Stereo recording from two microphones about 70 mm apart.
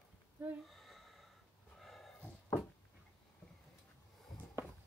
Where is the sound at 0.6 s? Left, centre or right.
Centre.